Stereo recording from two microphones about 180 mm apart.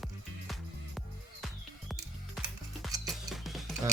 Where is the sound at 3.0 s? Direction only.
Centre (ahead or behind).